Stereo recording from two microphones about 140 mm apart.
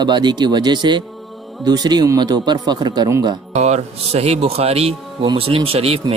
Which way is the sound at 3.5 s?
50° right (ahead or behind).